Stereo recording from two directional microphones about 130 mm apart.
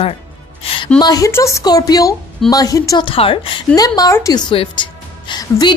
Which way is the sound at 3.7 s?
30° left (ahead or behind).